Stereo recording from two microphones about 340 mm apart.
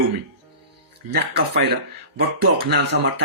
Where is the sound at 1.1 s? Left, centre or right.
Right.